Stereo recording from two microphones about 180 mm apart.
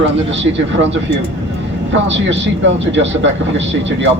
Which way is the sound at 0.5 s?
90° right.